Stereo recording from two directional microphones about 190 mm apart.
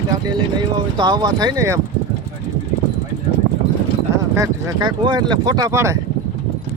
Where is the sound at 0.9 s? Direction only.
20° right (ahead or behind).